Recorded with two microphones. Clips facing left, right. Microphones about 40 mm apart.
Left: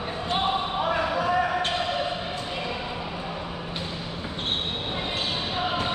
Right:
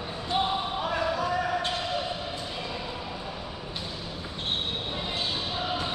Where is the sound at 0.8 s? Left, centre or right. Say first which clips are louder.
Left 3 dB; left.